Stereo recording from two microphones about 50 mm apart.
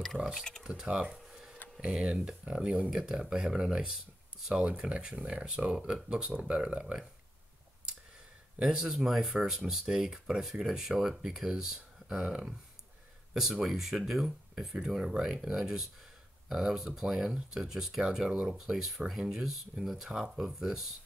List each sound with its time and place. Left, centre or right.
0.0 s speech: centre
0.7 s speech: centre
2.9 s speech: centre
8.6 s speech: centre